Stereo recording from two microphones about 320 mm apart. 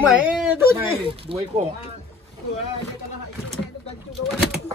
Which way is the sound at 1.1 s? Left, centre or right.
Centre.